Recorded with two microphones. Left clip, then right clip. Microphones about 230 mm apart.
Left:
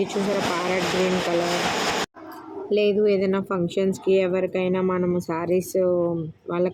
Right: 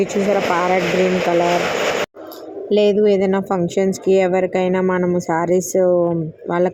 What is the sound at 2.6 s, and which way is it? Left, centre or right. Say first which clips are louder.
A woman's voice: right 6 dB; centre.